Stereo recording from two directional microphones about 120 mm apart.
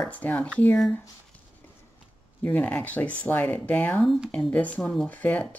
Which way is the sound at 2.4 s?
15° left (ahead or behind).